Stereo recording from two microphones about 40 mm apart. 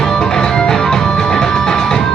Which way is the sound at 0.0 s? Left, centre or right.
Centre.